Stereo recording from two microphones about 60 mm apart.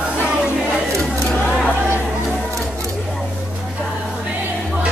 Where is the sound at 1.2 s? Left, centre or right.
Left.